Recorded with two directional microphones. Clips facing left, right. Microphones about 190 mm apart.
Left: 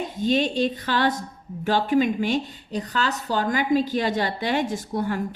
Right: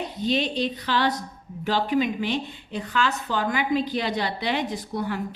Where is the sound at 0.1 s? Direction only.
45° left (ahead or behind).